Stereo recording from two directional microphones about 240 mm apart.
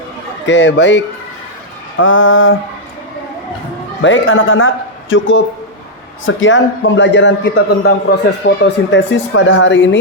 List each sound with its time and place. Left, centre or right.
0.4 s a man's voice: left
2.0 s mantra: left
4.0 s a man's voice: left